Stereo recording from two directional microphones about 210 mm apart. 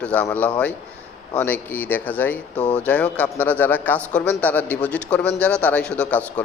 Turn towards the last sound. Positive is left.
turn(degrees=5)  # may be behind; listen again after turning